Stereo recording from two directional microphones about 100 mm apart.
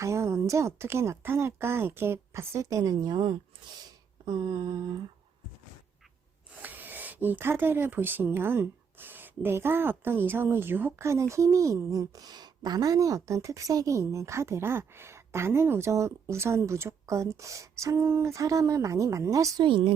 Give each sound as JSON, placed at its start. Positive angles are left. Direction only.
{"t": 0.0, "sound": "speech", "side_deg": -30}
{"t": 4.3, "sound": "a sound", "side_deg": -45}
{"t": 6.6, "sound": "speech", "side_deg": -20}
{"t": 19.6, "sound": "a woman's voice", "side_deg": -55}